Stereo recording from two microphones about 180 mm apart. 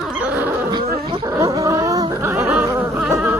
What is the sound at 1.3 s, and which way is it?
Dog, 15° right (ahead or behind).